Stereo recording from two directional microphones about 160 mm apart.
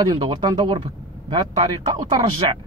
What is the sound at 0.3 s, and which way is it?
Speech, 25° right (ahead or behind).